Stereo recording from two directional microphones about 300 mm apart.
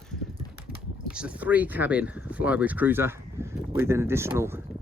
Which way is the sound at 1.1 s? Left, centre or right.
Centre.